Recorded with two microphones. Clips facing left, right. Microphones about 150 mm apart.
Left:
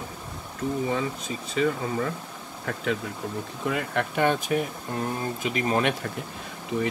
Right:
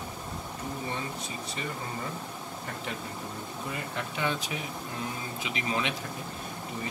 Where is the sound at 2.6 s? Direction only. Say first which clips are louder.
Left 11 dB; 90° left.